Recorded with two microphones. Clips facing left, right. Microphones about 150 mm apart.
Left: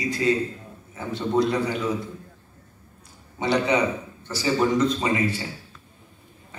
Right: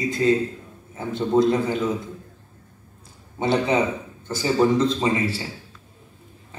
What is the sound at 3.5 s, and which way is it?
A man's voice, 25° right (ahead or behind).